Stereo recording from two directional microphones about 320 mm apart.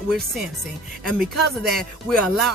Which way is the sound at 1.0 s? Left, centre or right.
Centre.